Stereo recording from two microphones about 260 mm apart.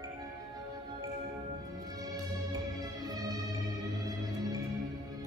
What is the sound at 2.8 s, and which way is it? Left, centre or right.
Music, centre.